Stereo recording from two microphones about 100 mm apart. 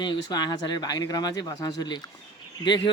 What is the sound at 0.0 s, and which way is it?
Speech, 45° left (ahead or behind).